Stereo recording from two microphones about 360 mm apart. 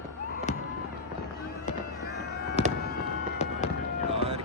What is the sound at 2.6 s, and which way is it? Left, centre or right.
Fireworks, centre.